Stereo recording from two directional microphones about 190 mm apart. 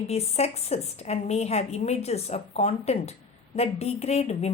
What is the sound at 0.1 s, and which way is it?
A woman's voice, 35° left (ahead or behind).